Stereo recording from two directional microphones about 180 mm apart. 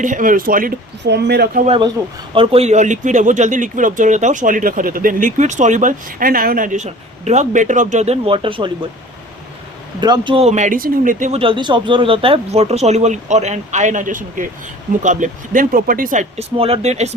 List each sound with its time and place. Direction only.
0.0 s speech: 45° right (ahead or behind)
1.0 s speech: 70° right (ahead or behind)
1.6 s speech: 30° right (ahead or behind)
10.0 s speech: 25° right (ahead or behind); by 11.3 s 45° right (ahead or behind)
11.3 s speech: 30° right (ahead or behind)